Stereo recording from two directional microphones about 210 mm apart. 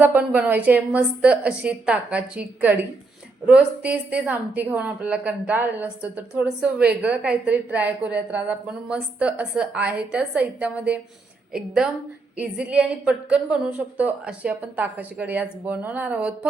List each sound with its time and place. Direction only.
0.0 s a woman's voice: 10° right (ahead or behind)